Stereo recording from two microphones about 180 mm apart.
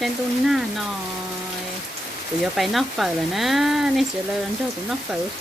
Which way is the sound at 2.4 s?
Centre (ahead or behind).